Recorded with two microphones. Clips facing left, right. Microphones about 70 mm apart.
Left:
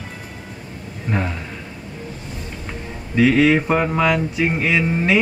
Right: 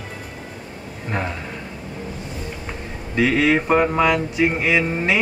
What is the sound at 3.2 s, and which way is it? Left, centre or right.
Speech, centre.